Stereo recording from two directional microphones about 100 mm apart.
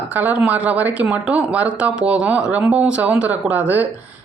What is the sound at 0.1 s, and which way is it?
Speech, 15° right (ahead or behind).